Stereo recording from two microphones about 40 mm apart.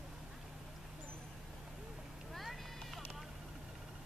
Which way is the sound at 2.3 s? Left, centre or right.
Centre.